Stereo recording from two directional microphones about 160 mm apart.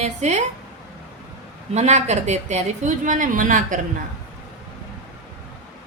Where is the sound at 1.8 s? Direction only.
45° right (ahead or behind).